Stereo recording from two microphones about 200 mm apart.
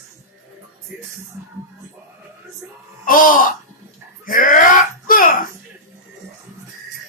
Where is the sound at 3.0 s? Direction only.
45° left (ahead or behind).